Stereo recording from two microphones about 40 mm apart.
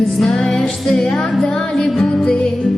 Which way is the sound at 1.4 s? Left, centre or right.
Centre.